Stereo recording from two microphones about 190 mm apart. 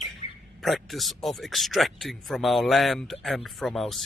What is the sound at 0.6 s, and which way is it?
Speech, centre (ahead or behind).